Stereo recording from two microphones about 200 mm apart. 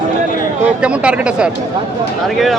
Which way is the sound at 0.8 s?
5° right (ahead or behind).